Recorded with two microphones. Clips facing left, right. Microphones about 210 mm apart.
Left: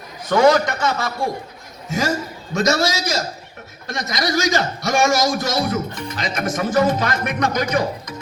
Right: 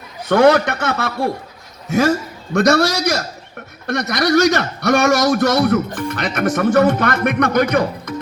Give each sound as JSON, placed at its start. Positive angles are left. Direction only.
{"t": 0.3, "sound": "a man's voice", "side_deg": -60}